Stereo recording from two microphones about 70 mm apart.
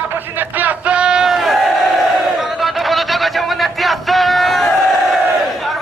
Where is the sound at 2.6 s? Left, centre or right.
Centre.